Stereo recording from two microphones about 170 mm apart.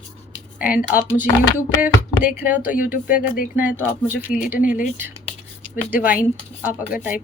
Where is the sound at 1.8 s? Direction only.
10° right (ahead or behind).